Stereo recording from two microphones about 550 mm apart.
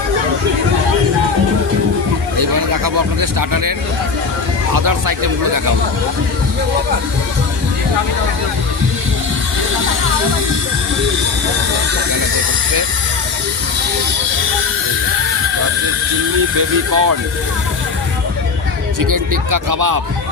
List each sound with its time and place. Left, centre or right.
2.4 s a sound: right
4.7 s speech: right
16.9 s speech: right
18.9 s speech: right